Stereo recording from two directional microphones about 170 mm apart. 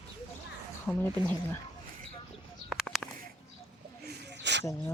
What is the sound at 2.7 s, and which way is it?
Bird, centre (ahead or behind).